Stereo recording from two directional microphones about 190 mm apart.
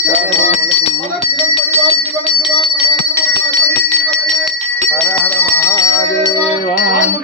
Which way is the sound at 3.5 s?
5° left (ahead or behind).